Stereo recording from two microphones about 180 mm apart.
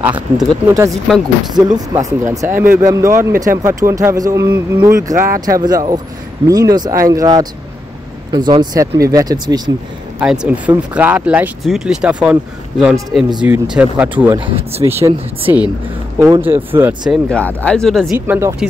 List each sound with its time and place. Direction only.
0.0 s speech: 10° right (ahead or behind)
5.1 s speech: 50° right (ahead or behind)
5.4 s speech: 20° right (ahead or behind)
10.2 s speech: 5° right (ahead or behind)
14.4 s speech: 30° right (ahead or behind)
14.9 s speech: 15° right (ahead or behind)
17.1 s speech: 5° left (ahead or behind)
18.1 s speech: 10° right (ahead or behind)